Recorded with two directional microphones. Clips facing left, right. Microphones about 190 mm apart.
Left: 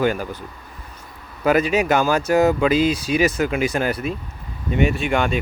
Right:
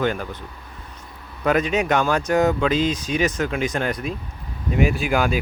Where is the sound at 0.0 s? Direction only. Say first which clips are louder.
Left 3 dB; 5° left (ahead or behind).